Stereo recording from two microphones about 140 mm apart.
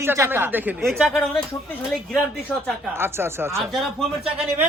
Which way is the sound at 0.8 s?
Centre (ahead or behind).